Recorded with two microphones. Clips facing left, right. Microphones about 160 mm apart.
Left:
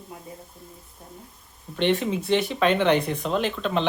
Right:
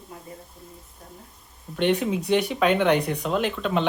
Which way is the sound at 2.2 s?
15° right (ahead or behind).